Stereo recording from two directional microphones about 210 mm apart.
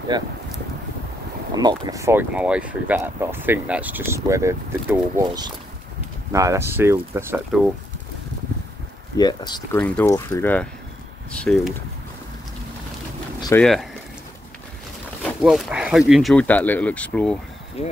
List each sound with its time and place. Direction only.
0.1 s speech: 20° right (ahead or behind)
1.5 s speech: 20° right (ahead or behind)
9.1 s speech: 20° left (ahead or behind)
9.8 s speech: 5° left (ahead or behind)
13.6 s speech: centre (ahead or behind)
15.4 s speech: centre (ahead or behind)
17.8 s speech: 30° left (ahead or behind)